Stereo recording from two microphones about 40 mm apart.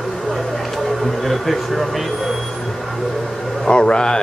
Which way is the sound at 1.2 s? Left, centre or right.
Centre.